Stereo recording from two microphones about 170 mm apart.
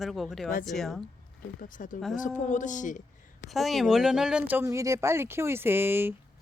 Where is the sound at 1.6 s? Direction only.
50° left (ahead or behind).